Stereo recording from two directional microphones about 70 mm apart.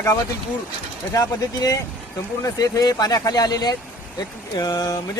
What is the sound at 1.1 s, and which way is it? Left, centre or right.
Speech, left.